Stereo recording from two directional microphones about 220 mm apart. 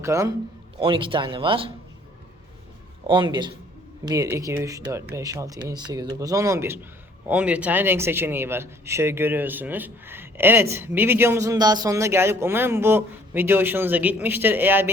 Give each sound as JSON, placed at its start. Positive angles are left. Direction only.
{"t": 0.0, "sound": "a man's voice", "side_deg": -15}
{"t": 0.8, "sound": "speech", "side_deg": -25}
{"t": 3.1, "sound": "a man's voice", "side_deg": -20}